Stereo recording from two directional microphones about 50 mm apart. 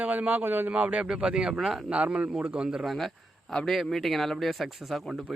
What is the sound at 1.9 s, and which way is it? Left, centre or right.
Speech, right.